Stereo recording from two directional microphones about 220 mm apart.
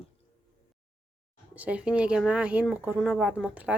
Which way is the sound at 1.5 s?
5° right (ahead or behind).